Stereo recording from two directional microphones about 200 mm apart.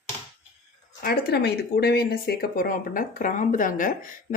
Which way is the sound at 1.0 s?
55° left (ahead or behind).